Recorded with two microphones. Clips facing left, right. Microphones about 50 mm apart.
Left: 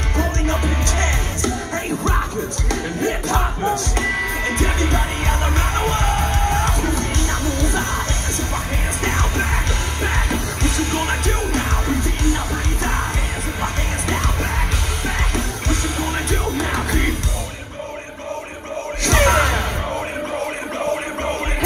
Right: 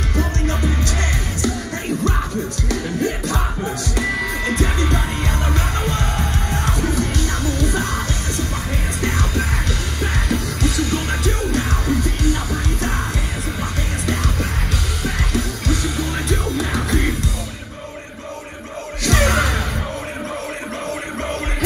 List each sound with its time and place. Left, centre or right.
0.2 s music: left
2.7 s music: left
9.0 s music: left
13.6 s music: left
19.0 s gasp: left